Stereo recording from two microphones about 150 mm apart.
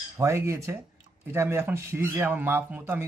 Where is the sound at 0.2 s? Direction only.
20° right (ahead or behind).